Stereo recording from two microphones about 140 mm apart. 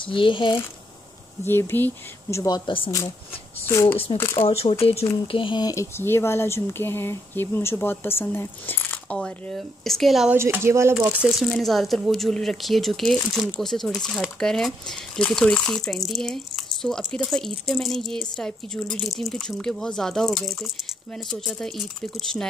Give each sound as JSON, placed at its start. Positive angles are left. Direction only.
{"t": 0.0, "sound": "speech", "side_deg": 35}
{"t": 1.4, "sound": "speech", "side_deg": 15}
{"t": 2.3, "sound": "speech", "side_deg": 25}
{"t": 3.6, "sound": "speech", "side_deg": 20}
{"t": 4.5, "sound": "speech", "side_deg": 45}
{"t": 10.3, "sound": "speech", "side_deg": -20}